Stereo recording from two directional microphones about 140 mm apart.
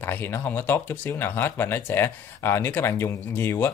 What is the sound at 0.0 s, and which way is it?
Speech, 15° left (ahead or behind).